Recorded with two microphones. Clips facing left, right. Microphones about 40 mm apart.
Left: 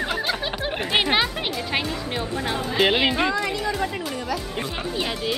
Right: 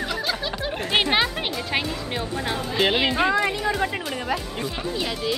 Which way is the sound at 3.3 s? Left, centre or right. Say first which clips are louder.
Right 2 dB; centre.